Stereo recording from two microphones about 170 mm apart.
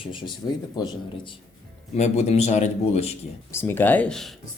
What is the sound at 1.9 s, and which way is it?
A man's voice, 40° left (ahead or behind).